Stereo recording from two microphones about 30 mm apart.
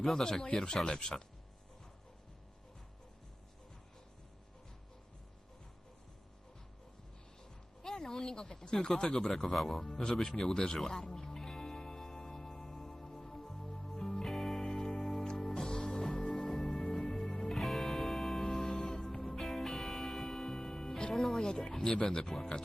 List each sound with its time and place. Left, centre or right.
0.2 s speech: left
7.8 s speech: left
10.5 s speech: left
10.8 s music: centre
16.0 s music: left
16.3 s music: centre
17.5 s music: centre
18.4 s music: left
19.4 s music: centre
21.3 s a sound: left
22.0 s speech: left